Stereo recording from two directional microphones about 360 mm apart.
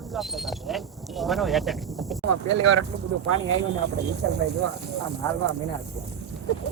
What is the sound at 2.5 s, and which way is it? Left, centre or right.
Speech, right.